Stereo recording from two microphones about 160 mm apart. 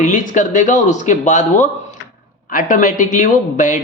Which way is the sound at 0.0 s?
50° left (ahead or behind).